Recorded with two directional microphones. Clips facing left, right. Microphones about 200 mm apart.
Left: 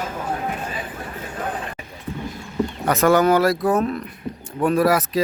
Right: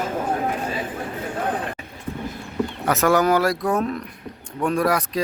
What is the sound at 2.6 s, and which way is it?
Speech, centre (ahead or behind).